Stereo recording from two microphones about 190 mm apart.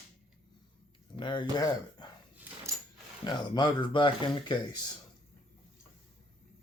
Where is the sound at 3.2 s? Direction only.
25° left (ahead or behind).